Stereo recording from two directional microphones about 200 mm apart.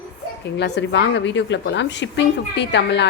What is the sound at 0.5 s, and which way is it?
A woman's voice, 60° left (ahead or behind).